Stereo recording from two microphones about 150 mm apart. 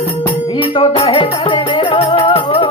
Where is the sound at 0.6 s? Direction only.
35° left (ahead or behind).